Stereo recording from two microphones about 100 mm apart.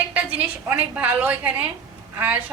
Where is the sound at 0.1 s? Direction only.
15° right (ahead or behind).